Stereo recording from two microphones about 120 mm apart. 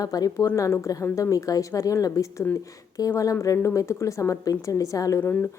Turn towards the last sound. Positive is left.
turn(degrees=20)  # may be behind; listen again after turning